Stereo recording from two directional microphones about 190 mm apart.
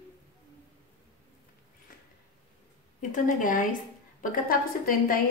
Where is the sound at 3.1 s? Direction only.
45° left (ahead or behind).